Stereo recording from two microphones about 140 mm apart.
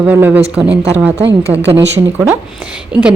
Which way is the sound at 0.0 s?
15° right (ahead or behind).